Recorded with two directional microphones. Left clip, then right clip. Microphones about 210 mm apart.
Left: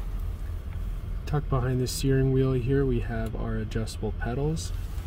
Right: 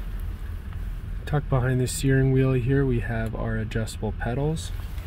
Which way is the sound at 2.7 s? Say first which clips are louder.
Right 2 dB; 60° right (ahead or behind).